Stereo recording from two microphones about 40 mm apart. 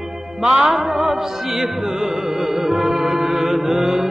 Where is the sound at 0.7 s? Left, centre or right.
Centre.